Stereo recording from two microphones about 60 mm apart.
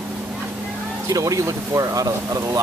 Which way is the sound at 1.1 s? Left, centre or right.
Right.